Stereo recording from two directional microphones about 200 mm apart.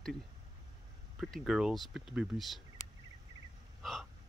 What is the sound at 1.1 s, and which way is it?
Speech, centre (ahead or behind).